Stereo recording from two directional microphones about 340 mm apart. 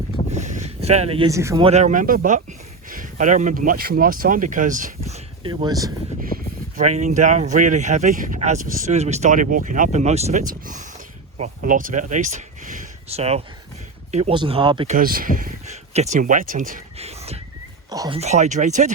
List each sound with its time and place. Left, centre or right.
0.3 s speech: right